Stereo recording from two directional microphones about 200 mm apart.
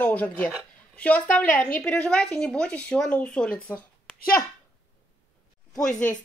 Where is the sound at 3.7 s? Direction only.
5° left (ahead or behind).